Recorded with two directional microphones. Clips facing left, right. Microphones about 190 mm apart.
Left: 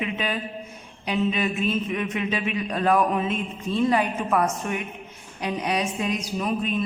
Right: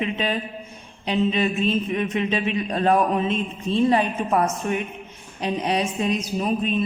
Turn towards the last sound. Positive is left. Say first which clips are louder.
# right 3 dB
turn(degrees=-25)  # may be behind; listen again after turning